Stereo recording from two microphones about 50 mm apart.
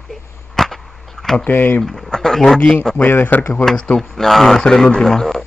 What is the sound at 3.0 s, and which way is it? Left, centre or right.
Speech, left.